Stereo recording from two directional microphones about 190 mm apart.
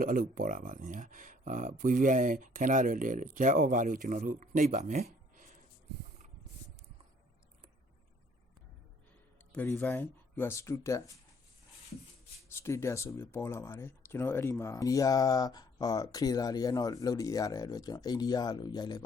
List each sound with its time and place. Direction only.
0.0 s speech: 50° right (ahead or behind)
9.5 s speech: 5° left (ahead or behind)
12.5 s speech: 15° left (ahead or behind)